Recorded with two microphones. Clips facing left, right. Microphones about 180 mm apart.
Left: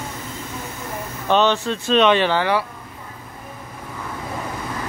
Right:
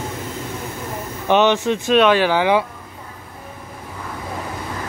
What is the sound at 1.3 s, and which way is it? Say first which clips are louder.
Speech: right 3 dB; 15° right (ahead or behind).